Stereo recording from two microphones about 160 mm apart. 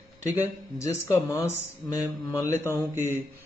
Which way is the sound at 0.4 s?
20° left (ahead or behind).